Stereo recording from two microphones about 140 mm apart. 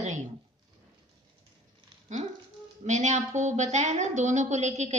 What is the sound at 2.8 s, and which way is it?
A woman's voice, 55° right (ahead or behind).